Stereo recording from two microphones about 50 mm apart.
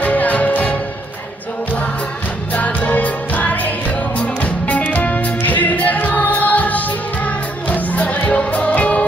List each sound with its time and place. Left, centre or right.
0.0 s music: left
2.5 s music: left